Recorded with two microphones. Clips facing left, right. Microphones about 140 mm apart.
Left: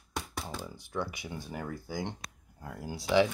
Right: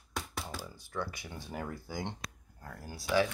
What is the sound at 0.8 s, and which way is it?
Speech, 15° left (ahead or behind).